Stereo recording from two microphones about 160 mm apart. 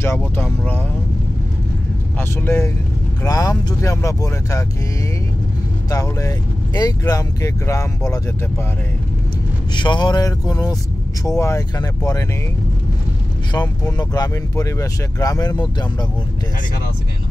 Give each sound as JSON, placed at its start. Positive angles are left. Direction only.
{"t": 0.0, "sound": "speech", "side_deg": 15}
{"t": 2.1, "sound": "speech", "side_deg": 15}
{"t": 5.9, "sound": "speech", "side_deg": 20}
{"t": 9.8, "sound": "speech", "side_deg": 30}
{"t": 13.5, "sound": "speech", "side_deg": 25}